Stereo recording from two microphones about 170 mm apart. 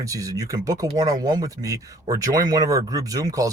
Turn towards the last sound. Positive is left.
turn(degrees=-20)  # may be behind; listen again after turning